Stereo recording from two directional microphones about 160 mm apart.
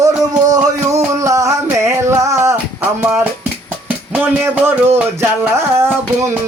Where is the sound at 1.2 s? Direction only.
20° right (ahead or behind).